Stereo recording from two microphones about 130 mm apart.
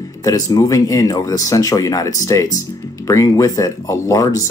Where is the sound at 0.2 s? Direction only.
25° left (ahead or behind).